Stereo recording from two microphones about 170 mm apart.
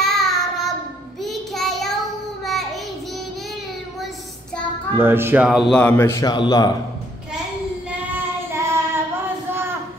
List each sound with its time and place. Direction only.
0.0 s child singing: centre (ahead or behind)
4.9 s speech: 15° right (ahead or behind)
5.8 s a man's voice: 10° left (ahead or behind)
8.5 s child singing: 15° right (ahead or behind)